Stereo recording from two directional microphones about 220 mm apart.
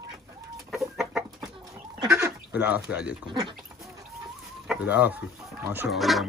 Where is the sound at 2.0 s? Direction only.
15° right (ahead or behind).